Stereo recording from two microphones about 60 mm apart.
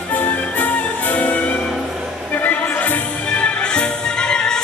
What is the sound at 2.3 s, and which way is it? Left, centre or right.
Music, left.